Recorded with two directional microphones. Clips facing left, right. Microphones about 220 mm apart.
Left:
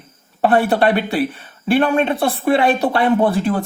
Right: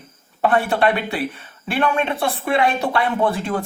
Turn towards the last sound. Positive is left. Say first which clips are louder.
# left 5 dB
turn(degrees=35)  # may be behind; listen again after turning